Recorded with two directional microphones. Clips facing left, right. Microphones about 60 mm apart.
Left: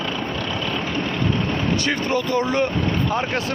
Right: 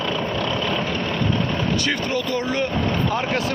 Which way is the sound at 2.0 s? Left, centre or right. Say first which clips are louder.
Left 2 dB; left.